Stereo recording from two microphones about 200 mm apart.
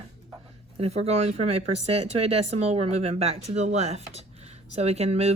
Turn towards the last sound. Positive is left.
turn(degrees=-30)  # may be behind; listen again after turning